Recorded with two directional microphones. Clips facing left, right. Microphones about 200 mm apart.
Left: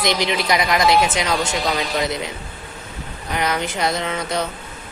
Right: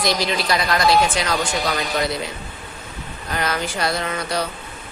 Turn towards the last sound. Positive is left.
turn(degrees=20)  # may be behind; listen again after turning